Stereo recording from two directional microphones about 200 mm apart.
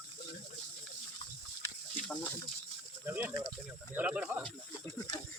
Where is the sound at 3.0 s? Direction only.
10° right (ahead or behind).